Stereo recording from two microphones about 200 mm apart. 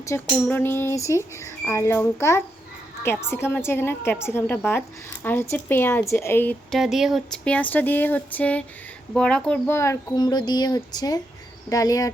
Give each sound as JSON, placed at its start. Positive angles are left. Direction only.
{"t": 0.0, "sound": "speech", "side_deg": 15}